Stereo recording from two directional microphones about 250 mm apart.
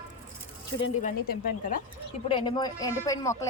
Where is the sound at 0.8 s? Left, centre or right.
Left.